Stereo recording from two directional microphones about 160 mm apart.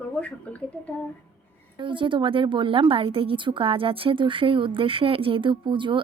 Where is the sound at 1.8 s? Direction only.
30° right (ahead or behind).